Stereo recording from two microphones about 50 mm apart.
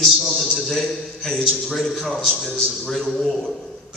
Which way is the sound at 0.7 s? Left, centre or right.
Centre.